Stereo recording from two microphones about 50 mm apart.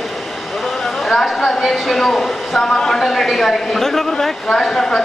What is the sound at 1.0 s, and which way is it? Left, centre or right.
A woman's voice, centre.